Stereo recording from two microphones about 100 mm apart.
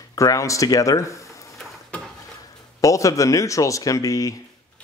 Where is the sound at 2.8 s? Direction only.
35° left (ahead or behind).